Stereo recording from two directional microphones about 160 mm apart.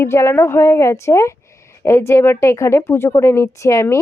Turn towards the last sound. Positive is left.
turn(degrees=20)  # may be behind; listen again after turning